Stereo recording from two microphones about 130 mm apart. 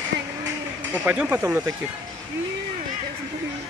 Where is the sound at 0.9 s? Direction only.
10° right (ahead or behind).